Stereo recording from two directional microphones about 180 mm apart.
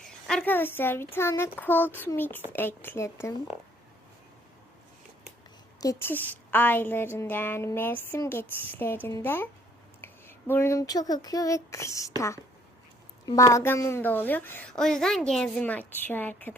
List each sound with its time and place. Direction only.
0.3 s a woman's voice: 5° left (ahead or behind)
5.8 s a woman's voice: 15° left (ahead or behind)
13.2 s a woman's voice: 20° left (ahead or behind)